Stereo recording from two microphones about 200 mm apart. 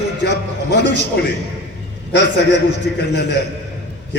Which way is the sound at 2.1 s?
60° left (ahead or behind).